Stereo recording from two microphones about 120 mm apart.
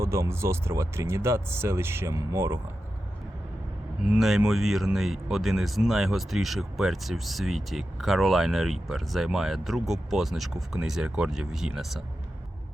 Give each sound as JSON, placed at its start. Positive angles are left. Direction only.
{"t": 0.0, "sound": "speech", "side_deg": -25}
{"t": 4.0, "sound": "speech", "side_deg": -5}